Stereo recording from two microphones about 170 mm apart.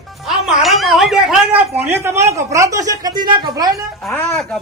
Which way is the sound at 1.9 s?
15° right (ahead or behind).